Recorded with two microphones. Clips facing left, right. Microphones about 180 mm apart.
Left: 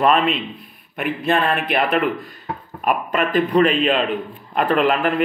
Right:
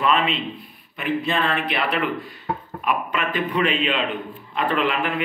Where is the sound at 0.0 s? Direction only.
50° left (ahead or behind).